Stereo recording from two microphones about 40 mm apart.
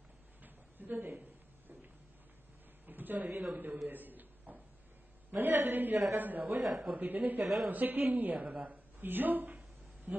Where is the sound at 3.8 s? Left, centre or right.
Right.